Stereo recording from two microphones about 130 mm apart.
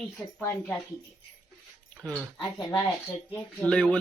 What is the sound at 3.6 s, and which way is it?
Speech, 10° left (ahead or behind).